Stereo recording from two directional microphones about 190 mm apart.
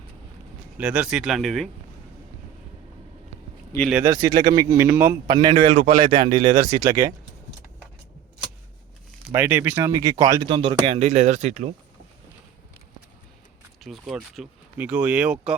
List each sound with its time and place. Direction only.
0.8 s speech: 5° right (ahead or behind)
4.0 s speech: 20° right (ahead or behind)
5.3 s speech: 25° right (ahead or behind)
9.3 s speech: 10° right (ahead or behind); by 11.7 s 40° right (ahead or behind)
13.8 s speech: centre (ahead or behind)